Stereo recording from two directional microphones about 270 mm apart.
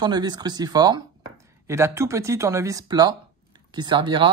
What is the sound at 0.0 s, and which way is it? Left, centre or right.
Speech, centre.